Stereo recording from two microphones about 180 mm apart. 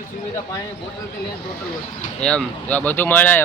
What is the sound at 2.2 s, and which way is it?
Speech, 5° left (ahead or behind).